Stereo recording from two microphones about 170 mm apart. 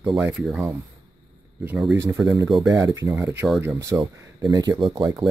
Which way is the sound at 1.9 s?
15° right (ahead or behind).